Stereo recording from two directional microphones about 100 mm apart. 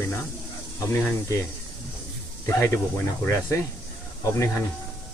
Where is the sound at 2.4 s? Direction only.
25° left (ahead or behind).